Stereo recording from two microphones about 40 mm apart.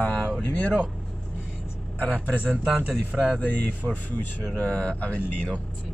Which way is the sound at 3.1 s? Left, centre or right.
Right.